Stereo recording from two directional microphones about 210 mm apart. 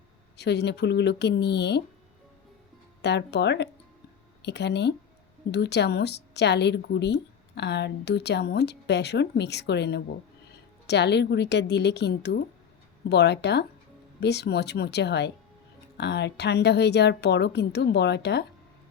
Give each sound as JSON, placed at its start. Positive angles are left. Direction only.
{"t": 0.3, "sound": "a woman's voice", "side_deg": 55}
{"t": 3.0, "sound": "a woman's voice", "side_deg": 55}